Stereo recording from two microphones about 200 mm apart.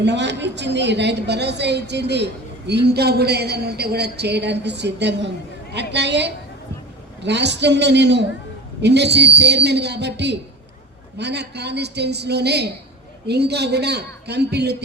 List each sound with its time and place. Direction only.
0.0 s a woman's voice: 60° right (ahead or behind)